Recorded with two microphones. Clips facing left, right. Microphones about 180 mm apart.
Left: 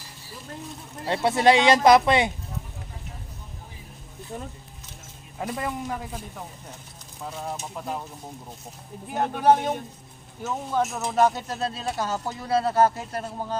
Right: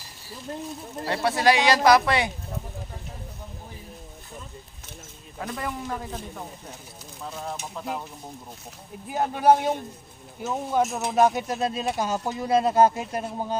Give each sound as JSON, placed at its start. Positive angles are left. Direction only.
{"t": 1.0, "sound": "speech", "side_deg": 20}
{"t": 5.4, "sound": "speech", "side_deg": 20}
{"t": 5.9, "sound": "speech", "side_deg": 10}
{"t": 7.4, "sound": "speech", "side_deg": 0}
{"t": 9.1, "sound": "speech", "side_deg": -10}